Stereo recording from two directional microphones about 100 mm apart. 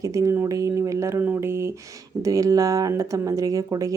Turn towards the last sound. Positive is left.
turn(degrees=-35)  # may be behind; listen again after turning